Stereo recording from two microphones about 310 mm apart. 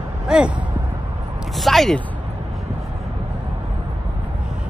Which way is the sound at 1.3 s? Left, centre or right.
Centre.